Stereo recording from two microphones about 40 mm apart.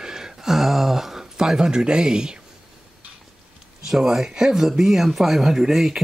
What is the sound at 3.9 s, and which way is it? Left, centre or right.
Speech, centre.